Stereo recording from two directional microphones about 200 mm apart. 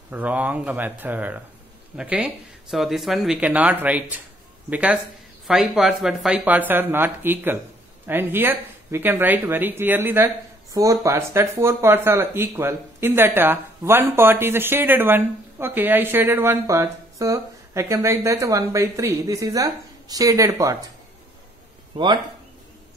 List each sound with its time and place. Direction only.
0.1 s speech: 10° right (ahead or behind)
21.9 s speech: 25° right (ahead or behind)